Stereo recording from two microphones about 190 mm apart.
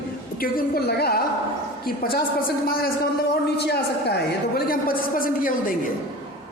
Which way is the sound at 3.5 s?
60° left (ahead or behind).